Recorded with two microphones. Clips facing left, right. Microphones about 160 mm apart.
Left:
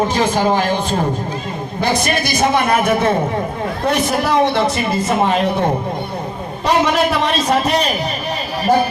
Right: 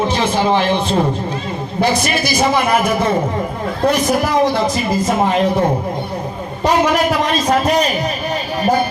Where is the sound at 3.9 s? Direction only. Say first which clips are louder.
Left 3 dB; 70° left (ahead or behind).